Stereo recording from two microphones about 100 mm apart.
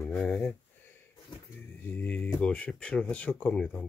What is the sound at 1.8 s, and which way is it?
Speech, 15° left (ahead or behind).